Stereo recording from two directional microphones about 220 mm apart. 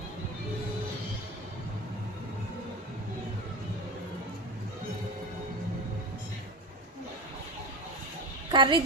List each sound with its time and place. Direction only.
8.4 s a child's voice: 20° right (ahead or behind)